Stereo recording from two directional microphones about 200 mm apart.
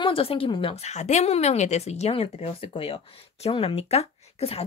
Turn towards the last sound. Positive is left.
turn(degrees=30)  # may be behind; listen again after turning